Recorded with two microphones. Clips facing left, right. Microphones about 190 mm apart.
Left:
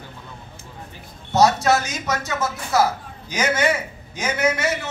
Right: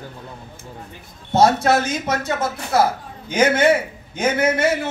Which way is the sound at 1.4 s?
55° right (ahead or behind).